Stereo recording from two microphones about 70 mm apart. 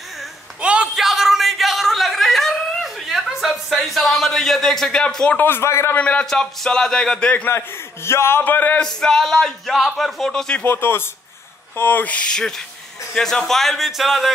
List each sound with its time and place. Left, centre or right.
0.6 s a sound: centre
0.9 s a sound: centre
5.0 s speech: centre
5.4 s a man's voice: left
5.9 s speech: centre
7.4 s a man's voice: left
8.8 s speech: centre
10.6 s a man's voice: left; by 14.3 s centre